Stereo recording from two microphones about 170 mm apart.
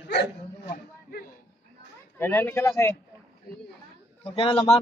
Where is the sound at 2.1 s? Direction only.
15° left (ahead or behind).